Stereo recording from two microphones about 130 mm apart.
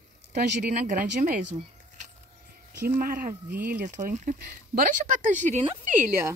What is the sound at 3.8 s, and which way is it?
Speech, 90° right.